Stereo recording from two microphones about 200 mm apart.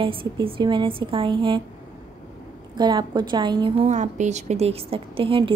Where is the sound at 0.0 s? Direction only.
25° right (ahead or behind).